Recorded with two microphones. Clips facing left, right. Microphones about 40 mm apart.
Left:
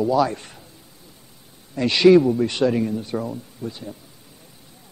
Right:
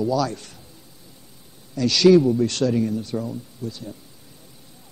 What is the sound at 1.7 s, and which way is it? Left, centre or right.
Speech, left.